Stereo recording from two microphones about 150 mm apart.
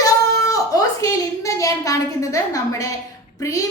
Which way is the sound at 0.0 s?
20° left (ahead or behind).